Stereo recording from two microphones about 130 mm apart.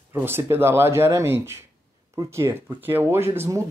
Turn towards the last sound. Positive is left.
turn(degrees=-20)  # may be behind; listen again after turning